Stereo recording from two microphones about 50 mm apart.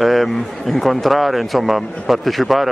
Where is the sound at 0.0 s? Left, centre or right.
Centre.